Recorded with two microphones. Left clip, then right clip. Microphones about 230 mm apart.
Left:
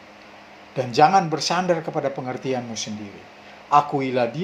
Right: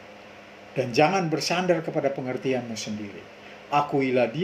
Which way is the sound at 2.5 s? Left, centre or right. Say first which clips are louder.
Left 1 dB; left.